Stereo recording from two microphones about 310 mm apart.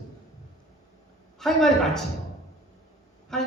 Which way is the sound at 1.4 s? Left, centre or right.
Centre.